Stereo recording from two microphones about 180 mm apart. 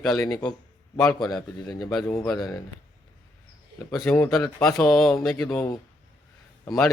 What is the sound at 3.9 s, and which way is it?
A man's voice, 5° left (ahead or behind).